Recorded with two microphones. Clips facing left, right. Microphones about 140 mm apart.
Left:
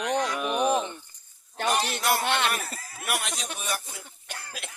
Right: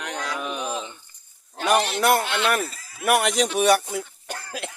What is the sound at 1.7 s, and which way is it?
Speech, 65° right (ahead or behind).